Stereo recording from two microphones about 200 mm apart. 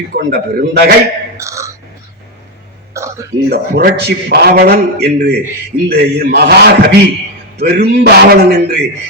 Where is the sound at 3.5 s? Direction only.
50° right (ahead or behind).